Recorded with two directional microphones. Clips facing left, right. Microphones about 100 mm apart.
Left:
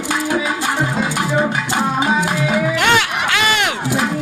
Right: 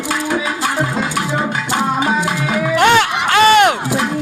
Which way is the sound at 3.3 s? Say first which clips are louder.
Right 11 dB; 40° right (ahead or behind).